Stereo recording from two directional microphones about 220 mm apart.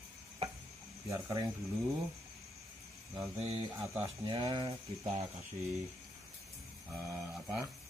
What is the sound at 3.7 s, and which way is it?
Speech, 15° right (ahead or behind).